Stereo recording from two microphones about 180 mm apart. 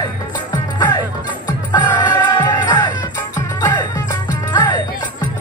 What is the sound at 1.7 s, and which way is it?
Music, 25° left (ahead or behind).